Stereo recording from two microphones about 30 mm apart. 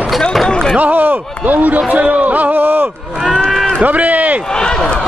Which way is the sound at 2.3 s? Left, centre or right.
Right.